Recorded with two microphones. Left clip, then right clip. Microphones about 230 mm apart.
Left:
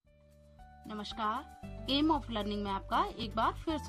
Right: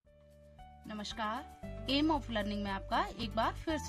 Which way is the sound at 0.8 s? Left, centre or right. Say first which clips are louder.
Left 3 dB; centre.